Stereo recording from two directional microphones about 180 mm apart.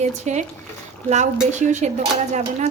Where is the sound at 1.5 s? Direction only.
40° right (ahead or behind).